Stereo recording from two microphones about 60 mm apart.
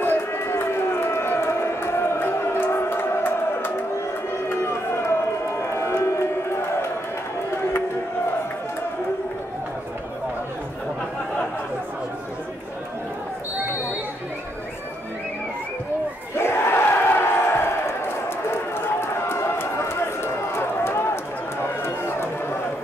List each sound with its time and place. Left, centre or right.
0.0 s run: left
4.5 s a sound: left
16.3 s battle cry: left
20.5 s run: left